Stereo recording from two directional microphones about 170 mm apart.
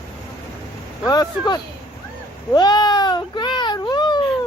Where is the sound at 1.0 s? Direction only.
20° left (ahead or behind).